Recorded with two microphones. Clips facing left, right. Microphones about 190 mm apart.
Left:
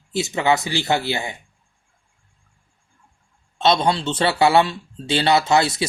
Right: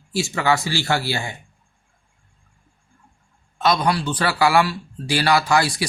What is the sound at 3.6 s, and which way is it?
Speech, 25° left (ahead or behind).